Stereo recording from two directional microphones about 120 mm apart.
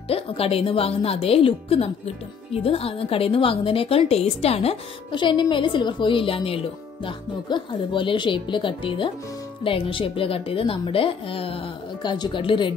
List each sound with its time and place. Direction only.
0.1 s a woman's voice: 55° left (ahead or behind)
5.1 s a woman's voice: 40° left (ahead or behind)